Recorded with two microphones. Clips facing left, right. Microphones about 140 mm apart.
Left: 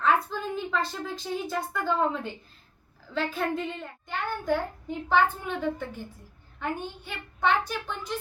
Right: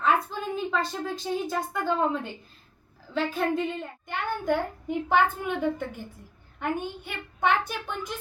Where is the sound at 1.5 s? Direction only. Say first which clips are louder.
Right 1 dB; 15° right (ahead or behind).